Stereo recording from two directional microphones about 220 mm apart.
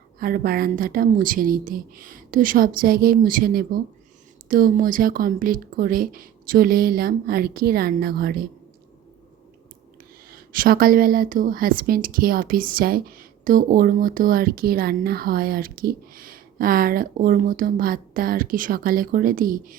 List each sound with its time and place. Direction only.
0.2 s a woman's voice: 40° right (ahead or behind)
10.2 s a woman's voice: 40° right (ahead or behind)